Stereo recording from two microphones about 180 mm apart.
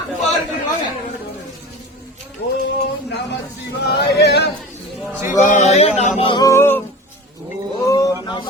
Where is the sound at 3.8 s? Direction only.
65° left (ahead or behind).